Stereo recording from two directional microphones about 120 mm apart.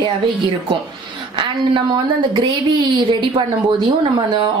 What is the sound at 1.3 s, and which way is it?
Speech, 40° right (ahead or behind).